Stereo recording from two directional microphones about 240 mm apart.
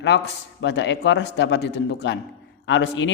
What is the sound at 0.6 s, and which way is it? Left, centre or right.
Speech, left.